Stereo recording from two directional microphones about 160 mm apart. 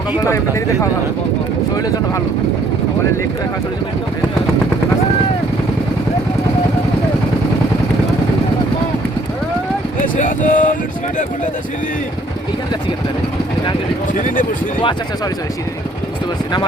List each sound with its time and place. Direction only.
10.2 s speech: 50° left (ahead or behind)
14.1 s speech: 55° left (ahead or behind)